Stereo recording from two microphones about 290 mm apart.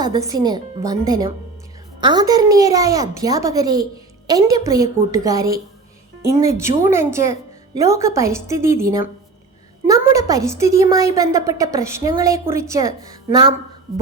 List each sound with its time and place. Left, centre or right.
0.0 s a woman's voice: centre